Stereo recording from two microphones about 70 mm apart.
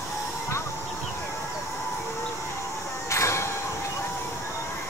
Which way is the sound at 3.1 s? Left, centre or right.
Left.